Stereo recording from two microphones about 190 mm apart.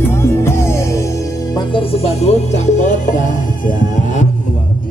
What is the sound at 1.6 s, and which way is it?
Music, 30° left (ahead or behind).